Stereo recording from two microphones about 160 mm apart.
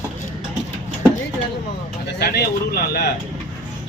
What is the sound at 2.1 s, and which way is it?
Speech, 90° left.